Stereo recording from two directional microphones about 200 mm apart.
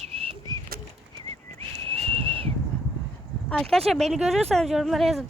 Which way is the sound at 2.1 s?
25° right (ahead or behind).